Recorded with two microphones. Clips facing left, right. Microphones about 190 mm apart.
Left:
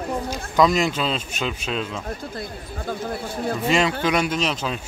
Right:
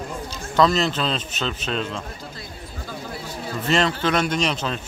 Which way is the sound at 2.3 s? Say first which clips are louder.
Left 5 dB; 55° left (ahead or behind).